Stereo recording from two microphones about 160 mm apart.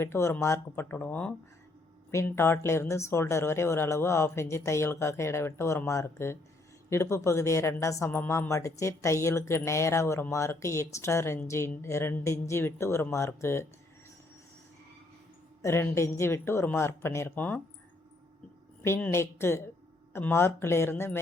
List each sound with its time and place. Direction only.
0.0 s a woman's voice: 15° left (ahead or behind)
15.6 s a woman's voice: 15° left (ahead or behind)
18.8 s a woman's voice: 10° left (ahead or behind)